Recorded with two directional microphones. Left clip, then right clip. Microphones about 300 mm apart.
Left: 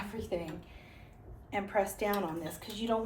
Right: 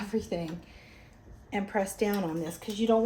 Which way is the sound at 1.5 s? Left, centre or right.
Right.